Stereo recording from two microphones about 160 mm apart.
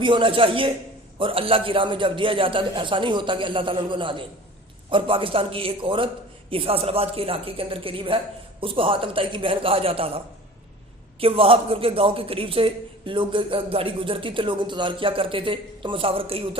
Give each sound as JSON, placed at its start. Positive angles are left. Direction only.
{"t": 0.0, "sound": "a man's voice", "side_deg": -30}
{"t": 11.2, "sound": "a man's voice", "side_deg": -35}